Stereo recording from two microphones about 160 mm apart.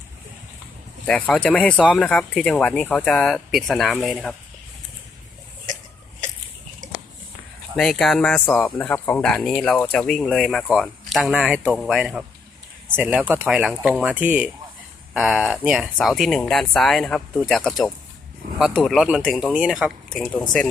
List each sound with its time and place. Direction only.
1.0 s speech: 5° left (ahead or behind)
6.8 s a sound: 55° right (ahead or behind)
7.8 s speech: centre (ahead or behind)